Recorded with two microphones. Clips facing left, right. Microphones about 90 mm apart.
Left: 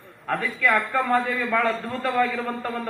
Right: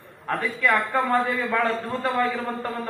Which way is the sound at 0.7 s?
35° right (ahead or behind).